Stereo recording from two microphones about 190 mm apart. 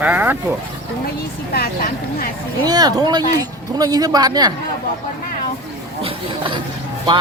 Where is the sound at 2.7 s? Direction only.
20° right (ahead or behind).